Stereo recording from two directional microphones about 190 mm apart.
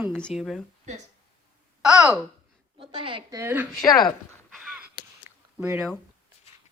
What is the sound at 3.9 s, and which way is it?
Speech, 20° left (ahead or behind).